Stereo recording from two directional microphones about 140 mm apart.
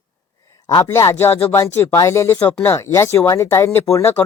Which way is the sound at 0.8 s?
20° left (ahead or behind).